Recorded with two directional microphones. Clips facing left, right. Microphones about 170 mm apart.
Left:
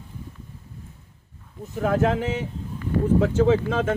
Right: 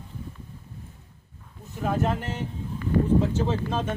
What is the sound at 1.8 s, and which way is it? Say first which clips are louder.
Speech: left 5 dB; 90° left.